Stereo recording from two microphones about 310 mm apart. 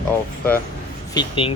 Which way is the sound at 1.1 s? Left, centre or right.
Centre.